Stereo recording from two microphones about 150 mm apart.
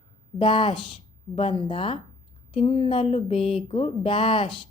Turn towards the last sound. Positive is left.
turn(degrees=40)  # may be behind; listen again after turning